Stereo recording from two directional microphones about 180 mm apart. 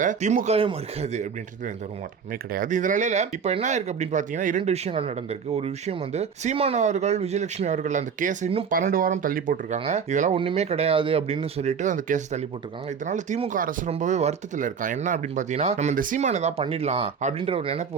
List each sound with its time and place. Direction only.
0.0 s speech: 40° right (ahead or behind)
8.7 s speech: 50° right (ahead or behind); by 17.8 s 30° right (ahead or behind)